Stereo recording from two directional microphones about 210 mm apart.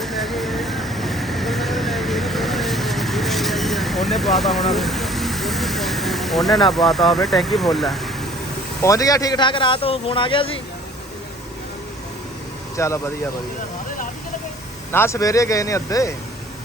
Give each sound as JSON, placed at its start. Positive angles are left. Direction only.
{"t": 0.0, "sound": "vehicle", "side_deg": 0}
{"t": 8.8, "sound": "a man's voice", "side_deg": 15}
{"t": 12.7, "sound": "speech", "side_deg": 15}
{"t": 14.9, "sound": "speech", "side_deg": 15}